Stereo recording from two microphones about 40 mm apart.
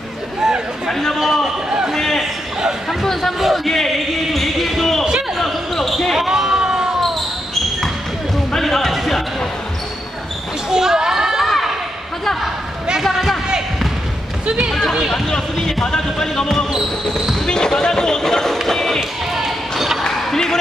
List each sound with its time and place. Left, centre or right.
0.8 s speech: centre
1.2 s a sound: centre
2.9 s speech: centre
3.3 s speech: centre
3.6 s basketball bounce: centre
6.1 s basketball bounce: centre
8.5 s music: centre
8.9 s basketball bounce: centre
10.7 s children playing: centre
11.4 s a sound: centre
14.4 s speech: right
14.8 s speech: centre
15.2 s speech: centre
18.7 s basketball bounce: centre